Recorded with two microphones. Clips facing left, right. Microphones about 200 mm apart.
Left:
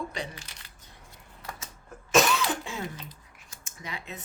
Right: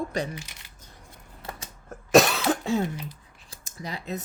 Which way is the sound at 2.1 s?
40° right (ahead or behind).